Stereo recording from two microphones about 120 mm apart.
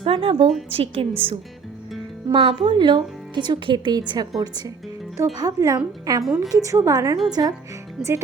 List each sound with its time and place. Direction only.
0.0 s a woman's voice: 50° right (ahead or behind); by 6.2 s 30° right (ahead or behind)
6.2 s a woman's voice: centre (ahead or behind)
6.5 s a woman's voice: 25° right (ahead or behind)
8.0 s a woman's voice: 5° right (ahead or behind)